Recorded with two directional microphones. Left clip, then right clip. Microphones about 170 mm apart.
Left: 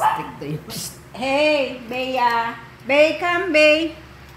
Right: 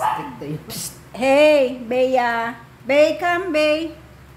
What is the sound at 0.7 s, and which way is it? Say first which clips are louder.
A woman's voice: even; 50° right (ahead or behind).